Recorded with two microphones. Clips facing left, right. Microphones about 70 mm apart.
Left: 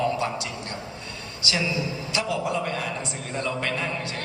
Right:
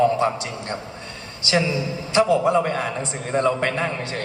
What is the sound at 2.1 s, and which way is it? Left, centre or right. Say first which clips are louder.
A man's voice: right 10 dB; right.